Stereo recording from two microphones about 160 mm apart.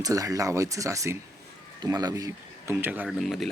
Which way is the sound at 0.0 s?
20° right (ahead or behind).